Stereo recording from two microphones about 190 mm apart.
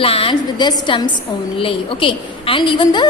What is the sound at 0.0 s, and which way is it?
A woman's voice, 30° left (ahead or behind).